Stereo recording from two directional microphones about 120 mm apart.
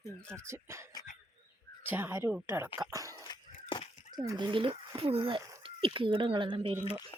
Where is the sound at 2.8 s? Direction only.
30° right (ahead or behind).